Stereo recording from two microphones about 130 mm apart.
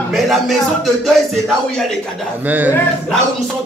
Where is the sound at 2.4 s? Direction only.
10° right (ahead or behind).